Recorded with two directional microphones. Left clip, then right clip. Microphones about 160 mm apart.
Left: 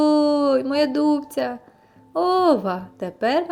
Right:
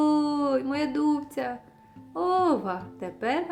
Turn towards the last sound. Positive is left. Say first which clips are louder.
# left 7 dB
turn(degrees=30)  # may be behind; listen again after turning